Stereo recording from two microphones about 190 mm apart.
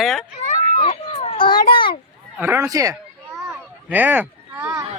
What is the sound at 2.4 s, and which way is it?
Speech, 10° right (ahead or behind).